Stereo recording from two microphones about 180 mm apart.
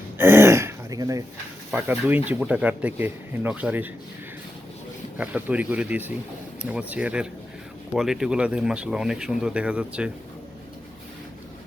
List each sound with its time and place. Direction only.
0.2 s throat clearing: 15° right (ahead or behind)
1.7 s speech: 10° right (ahead or behind)
5.1 s speech: 10° right (ahead or behind)